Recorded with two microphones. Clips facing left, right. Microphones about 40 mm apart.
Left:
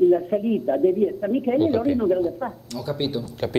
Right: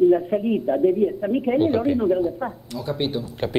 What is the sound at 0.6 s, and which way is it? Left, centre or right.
Speech, centre.